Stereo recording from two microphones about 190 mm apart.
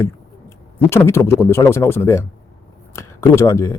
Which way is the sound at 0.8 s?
15° left (ahead or behind).